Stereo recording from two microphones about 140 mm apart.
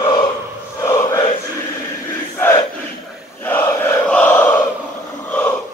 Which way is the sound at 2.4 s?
20° left (ahead or behind).